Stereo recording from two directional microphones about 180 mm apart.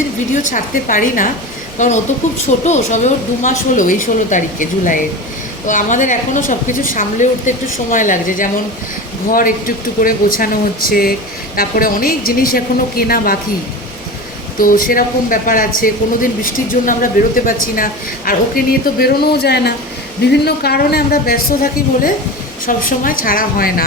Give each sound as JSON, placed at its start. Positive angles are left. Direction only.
{"t": 0.3, "sound": "a woman's voice", "side_deg": 45}
{"t": 2.6, "sound": "a woman's voice", "side_deg": 40}
{"t": 14.6, "sound": "a woman's voice", "side_deg": 50}